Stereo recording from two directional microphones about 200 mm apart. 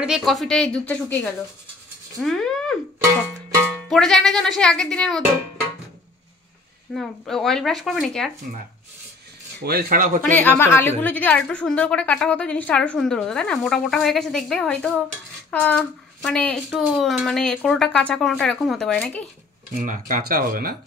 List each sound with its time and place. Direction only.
0.0 s a woman's voice: centre (ahead or behind)
2.1 s a sound: centre (ahead or behind)
3.9 s a woman's voice: centre (ahead or behind)
6.9 s a woman's voice: centre (ahead or behind)
9.7 s speech: 50° right (ahead or behind)
10.2 s a woman's voice: 10° left (ahead or behind)
19.7 s speech: 40° right (ahead or behind)